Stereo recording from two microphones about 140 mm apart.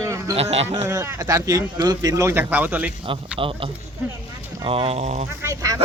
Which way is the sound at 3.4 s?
40° right (ahead or behind).